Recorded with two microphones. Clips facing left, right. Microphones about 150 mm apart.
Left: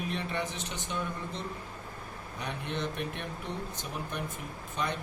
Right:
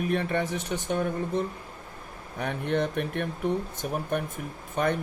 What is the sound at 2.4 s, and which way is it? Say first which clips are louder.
Speech: right 8 dB; 55° right (ahead or behind).